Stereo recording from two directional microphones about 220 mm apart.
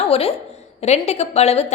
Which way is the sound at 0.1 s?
25° left (ahead or behind).